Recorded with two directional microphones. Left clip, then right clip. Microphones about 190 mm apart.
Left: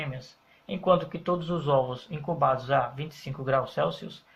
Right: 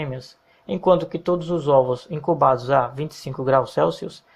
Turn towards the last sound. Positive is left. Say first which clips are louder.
# right 8 dB
turn(degrees=-40)  # may be behind; listen again after turning